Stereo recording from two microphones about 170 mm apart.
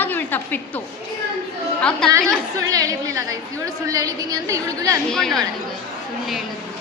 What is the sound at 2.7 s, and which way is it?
A woman's voice, 20° right (ahead or behind).